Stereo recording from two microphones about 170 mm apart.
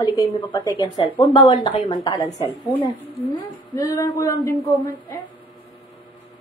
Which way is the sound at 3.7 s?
20° left (ahead or behind).